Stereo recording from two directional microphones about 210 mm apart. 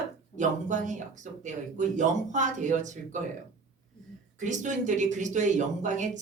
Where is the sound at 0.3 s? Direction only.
35° right (ahead or behind).